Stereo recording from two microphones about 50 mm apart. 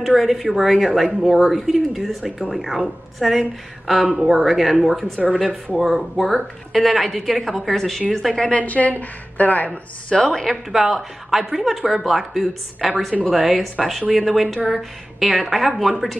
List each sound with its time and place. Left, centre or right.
0.0 s speech: centre
8.4 s a woman's voice: left
8.6 s a woman's voice: left
10.0 s a woman's voice: centre
10.7 s speech: centre